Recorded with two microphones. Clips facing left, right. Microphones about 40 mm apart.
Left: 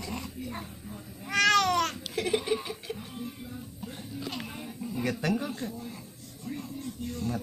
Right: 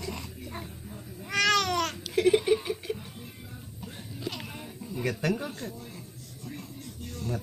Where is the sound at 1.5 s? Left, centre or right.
Centre.